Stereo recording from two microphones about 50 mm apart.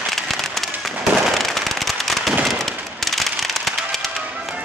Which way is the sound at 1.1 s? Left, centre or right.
Centre.